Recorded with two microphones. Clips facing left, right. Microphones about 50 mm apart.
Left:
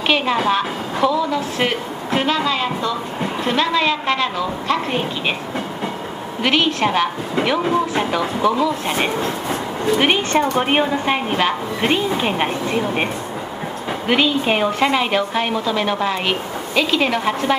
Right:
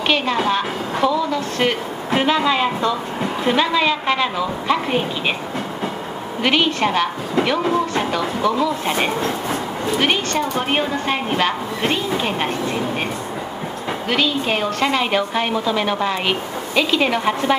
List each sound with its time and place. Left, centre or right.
0.5 s a woman's voice: centre
2.0 s a woman's voice: centre
6.4 s a woman's voice: centre
9.9 s a woman's voice: centre
10.3 s a woman's voice: left
10.6 s a woman's voice: centre
14.0 s a woman's voice: centre